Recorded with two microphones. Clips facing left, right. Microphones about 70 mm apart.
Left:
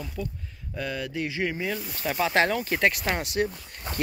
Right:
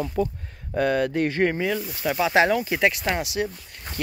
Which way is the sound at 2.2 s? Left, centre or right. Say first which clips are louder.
Right 4 dB; centre.